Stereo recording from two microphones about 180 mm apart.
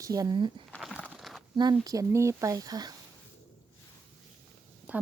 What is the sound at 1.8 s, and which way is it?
Speech, 20° right (ahead or behind).